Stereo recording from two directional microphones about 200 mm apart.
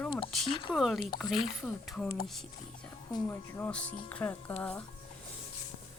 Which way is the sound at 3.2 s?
5° left (ahead or behind).